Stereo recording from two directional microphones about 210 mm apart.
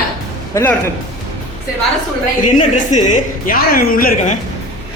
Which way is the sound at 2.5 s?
35° left (ahead or behind).